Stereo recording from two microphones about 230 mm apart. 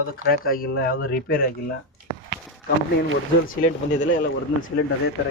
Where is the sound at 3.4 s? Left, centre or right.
Left.